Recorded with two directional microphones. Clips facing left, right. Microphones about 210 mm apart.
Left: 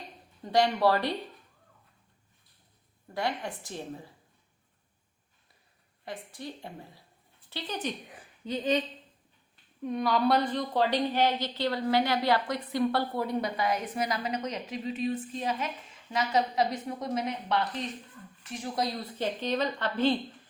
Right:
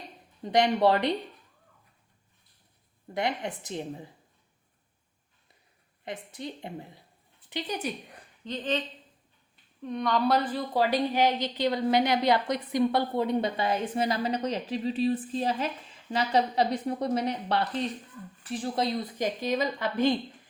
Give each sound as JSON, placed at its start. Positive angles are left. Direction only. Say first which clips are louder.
{"t": 0.4, "sound": "a woman's voice", "louder": "right 2 dB", "side_deg": -20}
{"t": 3.2, "sound": "a woman's voice", "louder": "right 2 dB", "side_deg": -20}
{"t": 6.1, "sound": "a woman's voice", "louder": "right 2 dB", "side_deg": -20}
{"t": 8.1, "sound": "a woman's voice", "louder": "left 2 dB", "side_deg": 5}
{"t": 9.8, "sound": "a woman's voice", "louder": "even", "side_deg": 5}
{"t": 19.1, "sound": "a woman's voice", "louder": "right 2 dB", "side_deg": -10}